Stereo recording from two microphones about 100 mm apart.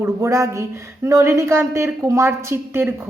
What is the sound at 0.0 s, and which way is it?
A woman's voice, 30° right (ahead or behind).